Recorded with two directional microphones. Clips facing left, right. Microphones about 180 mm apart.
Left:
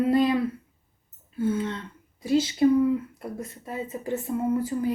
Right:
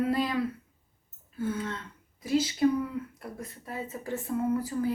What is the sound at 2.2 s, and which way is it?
Speech, 25° left (ahead or behind).